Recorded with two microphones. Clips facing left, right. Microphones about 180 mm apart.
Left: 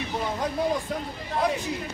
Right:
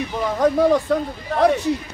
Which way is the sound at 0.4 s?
70° right (ahead or behind).